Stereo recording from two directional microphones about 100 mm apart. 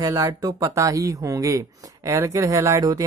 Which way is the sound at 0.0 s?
35° right (ahead or behind).